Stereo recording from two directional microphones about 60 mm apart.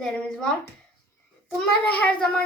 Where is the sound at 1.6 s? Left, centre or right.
Left.